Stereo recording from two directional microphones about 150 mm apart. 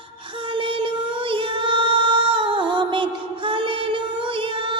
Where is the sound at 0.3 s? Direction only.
35° right (ahead or behind).